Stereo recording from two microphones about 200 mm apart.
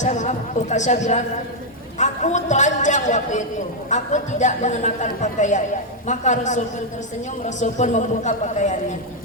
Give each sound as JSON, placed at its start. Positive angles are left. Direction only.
{"t": 0.0, "sound": "a man's voice", "side_deg": 35}